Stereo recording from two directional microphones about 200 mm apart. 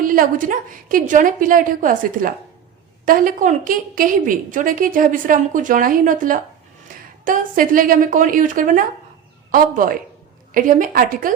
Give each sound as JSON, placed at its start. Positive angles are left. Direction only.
{"t": 0.0, "sound": "a woman's voice", "side_deg": -45}